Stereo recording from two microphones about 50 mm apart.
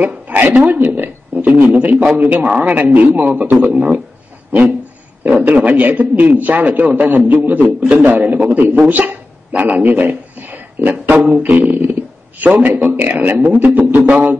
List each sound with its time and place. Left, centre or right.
0.0 s a sound: right
0.7 s a man's voice: right
3.6 s a man's voice: right
5.2 s a man's voice: right
11.2 s a man's voice: right